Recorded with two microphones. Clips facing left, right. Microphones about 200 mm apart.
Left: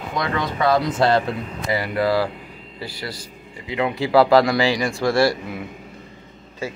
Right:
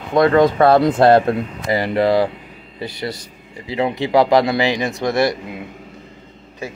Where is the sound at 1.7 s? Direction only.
25° right (ahead or behind).